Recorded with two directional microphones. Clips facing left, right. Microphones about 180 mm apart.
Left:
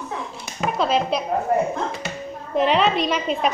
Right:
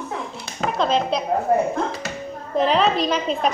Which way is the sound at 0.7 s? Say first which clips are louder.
Even; 5° left (ahead or behind).